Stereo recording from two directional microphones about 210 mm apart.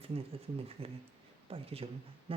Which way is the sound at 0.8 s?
25° right (ahead or behind).